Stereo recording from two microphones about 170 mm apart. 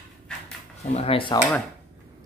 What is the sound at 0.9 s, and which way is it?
Speech, 35° left (ahead or behind).